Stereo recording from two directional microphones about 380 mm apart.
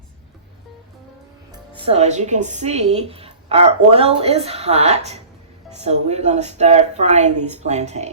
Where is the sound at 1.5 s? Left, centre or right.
Centre.